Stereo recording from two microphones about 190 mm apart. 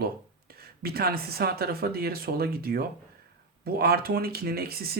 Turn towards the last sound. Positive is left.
turn(degrees=-55)  # may be behind; listen again after turning